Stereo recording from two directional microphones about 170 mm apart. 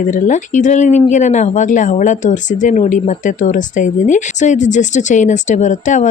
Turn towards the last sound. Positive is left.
turn(degrees=45)  # may be behind; listen again after turning